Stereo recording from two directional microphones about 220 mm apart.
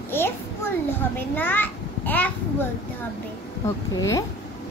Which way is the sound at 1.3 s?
10° left (ahead or behind).